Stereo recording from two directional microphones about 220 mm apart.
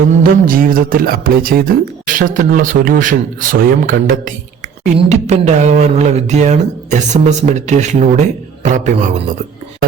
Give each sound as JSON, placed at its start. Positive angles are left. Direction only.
{"t": 0.2, "sound": "speech", "side_deg": -40}